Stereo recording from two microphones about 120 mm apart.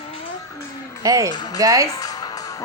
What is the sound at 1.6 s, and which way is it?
Speech, 25° right (ahead or behind).